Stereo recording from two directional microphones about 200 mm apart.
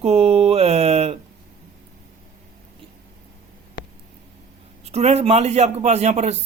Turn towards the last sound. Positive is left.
turn(degrees=-35)  # may be behind; listen again after turning